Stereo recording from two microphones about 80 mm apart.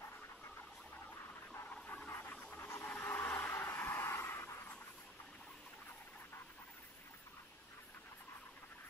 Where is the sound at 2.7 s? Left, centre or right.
Left.